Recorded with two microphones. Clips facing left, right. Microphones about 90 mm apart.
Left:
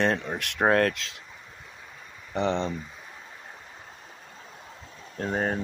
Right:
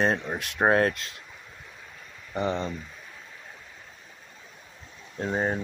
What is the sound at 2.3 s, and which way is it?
Speech, 75° left (ahead or behind).